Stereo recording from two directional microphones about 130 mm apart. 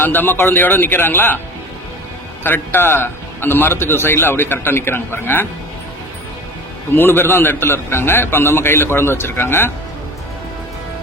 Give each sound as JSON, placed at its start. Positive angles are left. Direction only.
{"t": 0.0, "sound": "a man's voice", "side_deg": 15}
{"t": 2.4, "sound": "a man's voice", "side_deg": 15}
{"t": 6.9, "sound": "a man's voice", "side_deg": 15}